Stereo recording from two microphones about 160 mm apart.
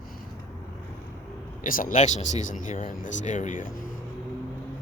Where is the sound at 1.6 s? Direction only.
60° left (ahead or behind).